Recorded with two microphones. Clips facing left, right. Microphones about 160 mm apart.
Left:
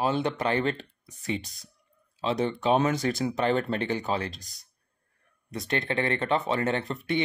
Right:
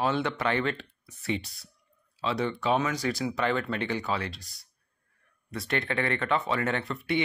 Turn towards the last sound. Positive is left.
turn(degrees=25)  # may be behind; listen again after turning